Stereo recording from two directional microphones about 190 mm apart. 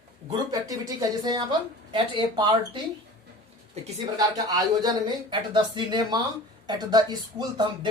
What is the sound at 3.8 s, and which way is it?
Speech, 35° right (ahead or behind).